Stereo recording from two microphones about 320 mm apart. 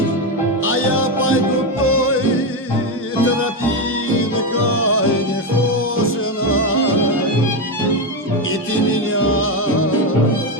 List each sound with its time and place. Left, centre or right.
0.6 s music: left
4.5 s music: left
9.1 s music: left